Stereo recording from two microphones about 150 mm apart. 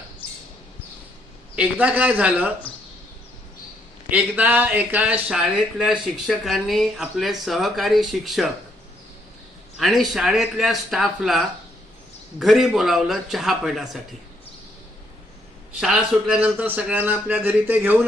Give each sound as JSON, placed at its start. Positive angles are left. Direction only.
{"t": 1.5, "sound": "a man's voice", "side_deg": -10}
{"t": 4.1, "sound": "a man's voice", "side_deg": -10}
{"t": 9.7, "sound": "speech", "side_deg": 0}
{"t": 15.8, "sound": "a man's voice", "side_deg": -5}